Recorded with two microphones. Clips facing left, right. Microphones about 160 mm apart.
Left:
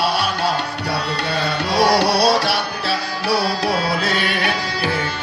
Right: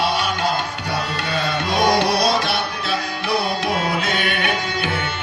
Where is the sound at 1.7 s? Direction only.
35° left (ahead or behind).